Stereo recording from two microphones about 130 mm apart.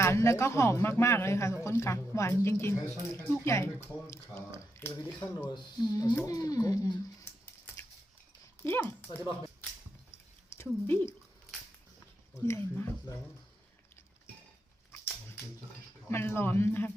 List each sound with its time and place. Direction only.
0.0 s speech: 20° left (ahead or behind)
5.5 s speech: 35° left (ahead or behind)
8.6 s speech: 20° left (ahead or behind)
10.1 s a sound: 20° left (ahead or behind)
12.3 s speech: 20° left (ahead or behind)
16.0 s speech: 20° left (ahead or behind)